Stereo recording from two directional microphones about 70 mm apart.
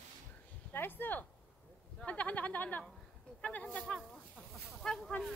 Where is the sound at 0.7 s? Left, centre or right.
Left.